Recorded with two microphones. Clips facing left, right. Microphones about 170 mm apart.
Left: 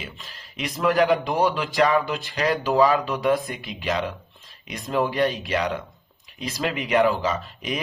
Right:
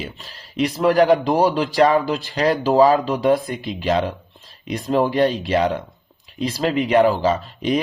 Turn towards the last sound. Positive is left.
turn(degrees=-30)  # may be behind; listen again after turning